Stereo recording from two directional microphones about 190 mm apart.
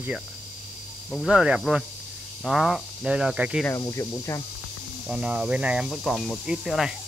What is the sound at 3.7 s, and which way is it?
Speech, 15° left (ahead or behind).